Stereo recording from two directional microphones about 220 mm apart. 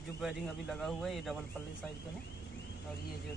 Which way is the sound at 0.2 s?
Centre (ahead or behind).